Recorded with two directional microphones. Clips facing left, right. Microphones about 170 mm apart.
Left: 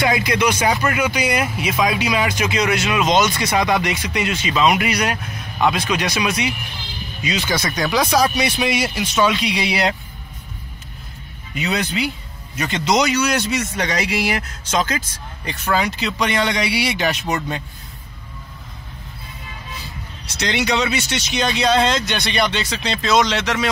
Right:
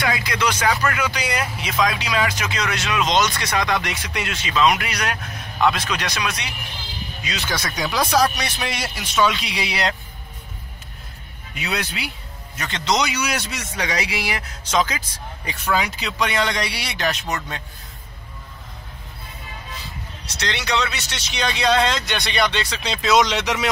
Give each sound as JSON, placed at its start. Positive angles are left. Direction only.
{"t": 0.0, "sound": "speech", "side_deg": 20}
{"t": 0.4, "sound": "speech", "side_deg": 10}
{"t": 11.5, "sound": "speech", "side_deg": -5}
{"t": 13.1, "sound": "speech", "side_deg": -5}
{"t": 20.3, "sound": "speech", "side_deg": 15}